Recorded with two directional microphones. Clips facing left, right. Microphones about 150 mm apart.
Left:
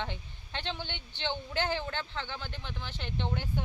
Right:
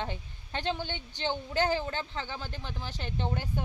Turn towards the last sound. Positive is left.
turn(degrees=-40)  # may be behind; listen again after turning